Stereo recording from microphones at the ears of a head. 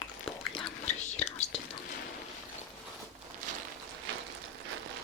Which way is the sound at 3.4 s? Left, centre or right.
Right.